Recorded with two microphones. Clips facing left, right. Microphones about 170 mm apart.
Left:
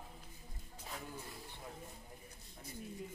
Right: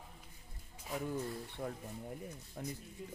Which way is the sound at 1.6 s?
60° right (ahead or behind).